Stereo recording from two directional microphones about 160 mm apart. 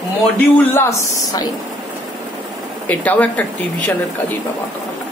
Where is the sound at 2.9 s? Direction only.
10° left (ahead or behind).